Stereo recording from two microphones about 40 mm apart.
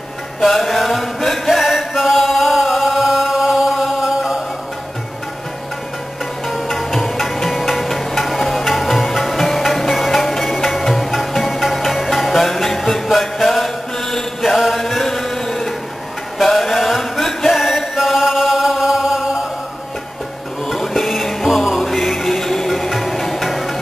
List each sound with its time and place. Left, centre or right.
0.4 s chant: centre
6.4 s music: centre
14.4 s chant: centre
20.6 s music: centre